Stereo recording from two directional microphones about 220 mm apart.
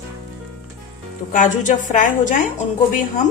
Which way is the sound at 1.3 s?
35° left (ahead or behind).